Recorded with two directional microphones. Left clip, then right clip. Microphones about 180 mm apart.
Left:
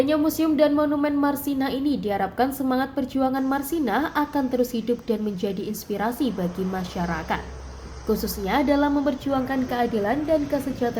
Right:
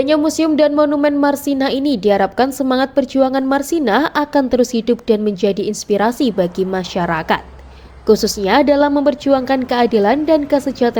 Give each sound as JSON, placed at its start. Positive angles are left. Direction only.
{"t": 0.0, "sound": "a woman's voice", "side_deg": -45}